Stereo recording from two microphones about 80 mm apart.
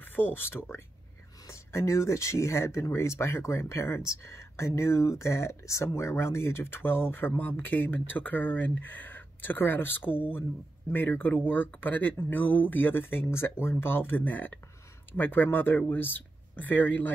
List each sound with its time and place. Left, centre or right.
0.0 s speech: left